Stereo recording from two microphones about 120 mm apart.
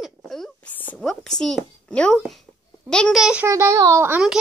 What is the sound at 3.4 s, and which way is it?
Speech, 25° right (ahead or behind).